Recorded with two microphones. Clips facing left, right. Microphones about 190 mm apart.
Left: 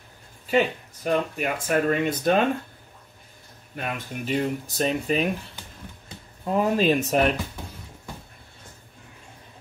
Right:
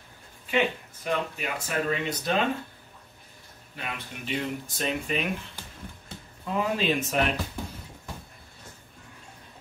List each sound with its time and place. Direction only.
0.5 s speech: 40° left (ahead or behind)
3.7 s speech: 45° left (ahead or behind)
6.4 s speech: 45° left (ahead or behind)